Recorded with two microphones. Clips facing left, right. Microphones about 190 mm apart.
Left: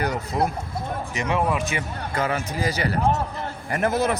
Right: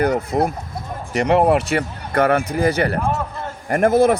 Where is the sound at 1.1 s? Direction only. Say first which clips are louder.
Right 9 dB; 65° right (ahead or behind).